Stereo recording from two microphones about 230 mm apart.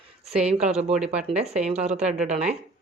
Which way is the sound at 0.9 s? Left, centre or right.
Centre.